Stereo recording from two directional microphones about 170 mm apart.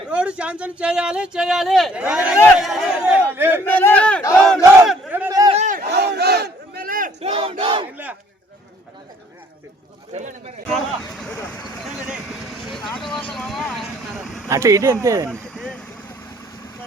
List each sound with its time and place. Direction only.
0.1 s speech: 5° right (ahead or behind)
3.7 s a sound: 10° left (ahead or behind)
4.4 s battle cry: centre (ahead or behind)
5.5 s crowd: 45° right (ahead or behind)
5.9 s battle cry: 80° right; by 7.1 s 55° right (ahead or behind)
7.2 s battle cry: 35° right (ahead or behind)
10.1 s a sound: 40° right (ahead or behind)
10.7 s speech: centre (ahead or behind)
12.0 s vehicle: centre (ahead or behind)
14.5 s speech: 20° right (ahead or behind)
15.3 s vehicle: 5° left (ahead or behind)